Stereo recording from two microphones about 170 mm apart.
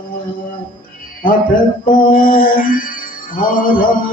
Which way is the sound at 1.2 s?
55° left (ahead or behind).